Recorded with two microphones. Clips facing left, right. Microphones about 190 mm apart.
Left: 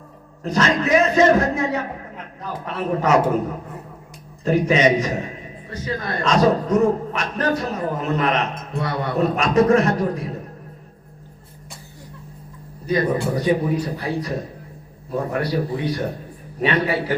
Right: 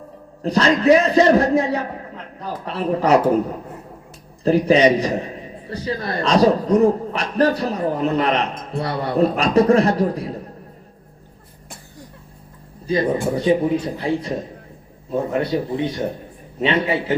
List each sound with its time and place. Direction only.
0.4 s a man's voice: 35° right (ahead or behind)
4.4 s a man's voice: 35° right (ahead or behind)
12.9 s speech: 30° right (ahead or behind)